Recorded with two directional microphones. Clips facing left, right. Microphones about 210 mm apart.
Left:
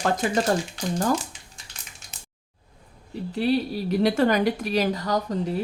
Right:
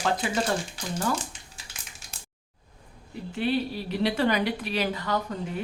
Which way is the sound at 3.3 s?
40° left (ahead or behind).